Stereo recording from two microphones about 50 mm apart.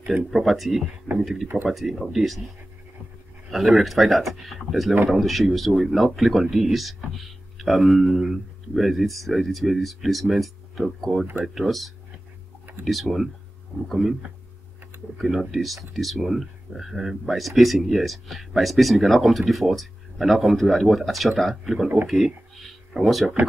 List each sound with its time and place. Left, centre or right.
0.0 s speech: centre
15.1 s speech: centre
22.0 s a sound: centre
22.9 s speech: centre